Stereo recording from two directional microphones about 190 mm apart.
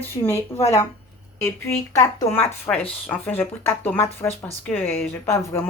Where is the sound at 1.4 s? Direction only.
15° left (ahead or behind).